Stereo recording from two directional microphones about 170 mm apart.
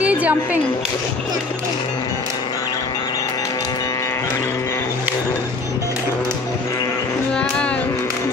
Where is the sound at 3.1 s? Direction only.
20° left (ahead or behind).